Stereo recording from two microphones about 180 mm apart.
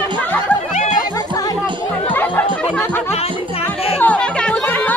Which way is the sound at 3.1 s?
35° left (ahead or behind).